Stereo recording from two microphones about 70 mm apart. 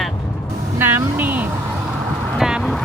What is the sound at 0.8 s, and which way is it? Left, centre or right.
Speech, right.